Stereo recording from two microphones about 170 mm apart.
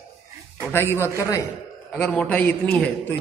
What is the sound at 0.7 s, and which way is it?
Speech, 15° left (ahead or behind).